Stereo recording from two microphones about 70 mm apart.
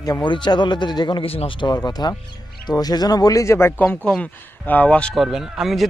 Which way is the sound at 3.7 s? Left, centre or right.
Left.